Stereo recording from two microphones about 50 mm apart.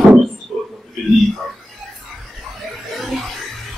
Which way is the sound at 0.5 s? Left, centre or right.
Centre.